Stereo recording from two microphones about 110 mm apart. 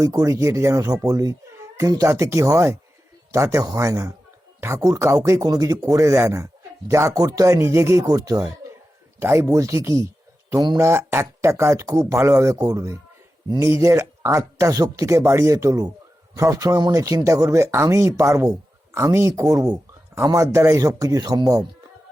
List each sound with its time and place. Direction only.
0.0 s a man's voice: 30° right (ahead or behind)
9.2 s a man's voice: 25° right (ahead or behind)